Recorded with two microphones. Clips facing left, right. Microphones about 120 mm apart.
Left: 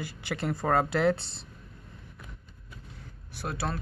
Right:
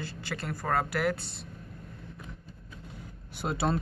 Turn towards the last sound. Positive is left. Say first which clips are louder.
# right 4 dB
turn(degrees=-20)  # may be behind; listen again after turning